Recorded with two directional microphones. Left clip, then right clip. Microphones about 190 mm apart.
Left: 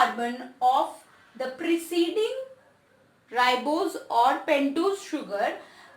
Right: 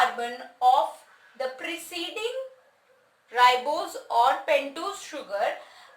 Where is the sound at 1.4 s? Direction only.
Centre (ahead or behind).